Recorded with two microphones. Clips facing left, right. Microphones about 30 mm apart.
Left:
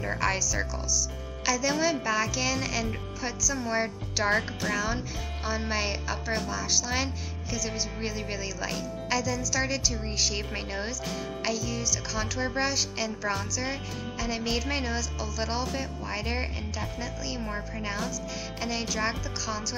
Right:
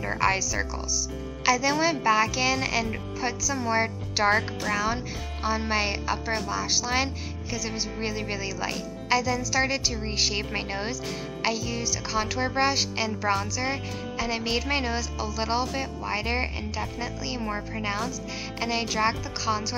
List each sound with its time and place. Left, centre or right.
0.0 s speech: centre
4.4 s speech: centre
4.7 s speech: centre
16.1 s speech: right